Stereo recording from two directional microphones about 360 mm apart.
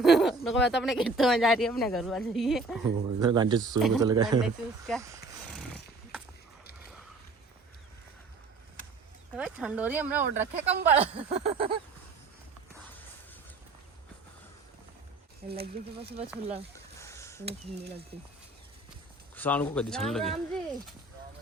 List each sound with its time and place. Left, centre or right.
0.0 s speech: centre
3.2 s speech: centre
3.8 s speech: centre
4.1 s speech: centre
5.7 s horse: centre
9.3 s speech: centre
11.2 s speech: centre
15.4 s speech: centre
16.7 s a sound: centre
19.4 s speech: centre